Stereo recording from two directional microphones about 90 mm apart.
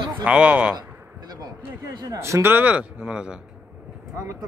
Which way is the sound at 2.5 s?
15° right (ahead or behind).